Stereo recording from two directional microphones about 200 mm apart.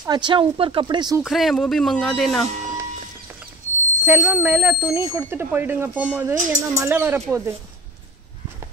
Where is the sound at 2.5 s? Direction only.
35° right (ahead or behind).